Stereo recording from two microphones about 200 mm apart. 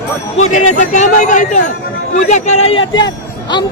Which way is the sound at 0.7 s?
40° left (ahead or behind).